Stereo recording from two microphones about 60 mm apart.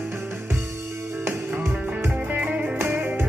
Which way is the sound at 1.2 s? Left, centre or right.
Right.